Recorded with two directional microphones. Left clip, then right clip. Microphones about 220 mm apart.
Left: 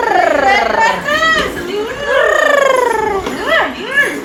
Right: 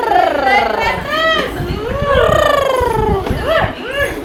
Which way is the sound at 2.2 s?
Centre (ahead or behind).